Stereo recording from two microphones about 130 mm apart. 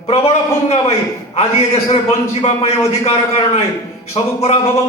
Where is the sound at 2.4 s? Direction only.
55° left (ahead or behind).